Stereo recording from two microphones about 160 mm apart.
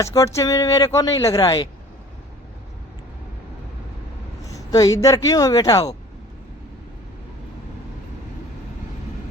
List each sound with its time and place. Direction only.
0.0 s speech: 20° left (ahead or behind)
4.5 s speech: 20° left (ahead or behind)